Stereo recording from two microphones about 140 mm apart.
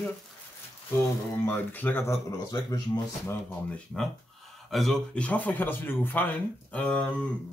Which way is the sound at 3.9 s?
Centre (ahead or behind).